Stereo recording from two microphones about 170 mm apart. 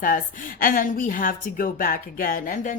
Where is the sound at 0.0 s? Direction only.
55° left (ahead or behind).